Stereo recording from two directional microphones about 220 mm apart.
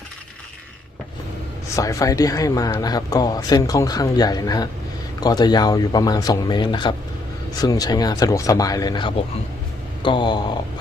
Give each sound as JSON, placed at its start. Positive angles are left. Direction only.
{"t": 1.7, "sound": "speech", "side_deg": 15}